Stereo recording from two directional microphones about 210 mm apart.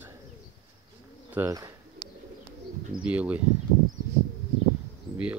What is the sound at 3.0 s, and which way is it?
Speech, 5° right (ahead or behind).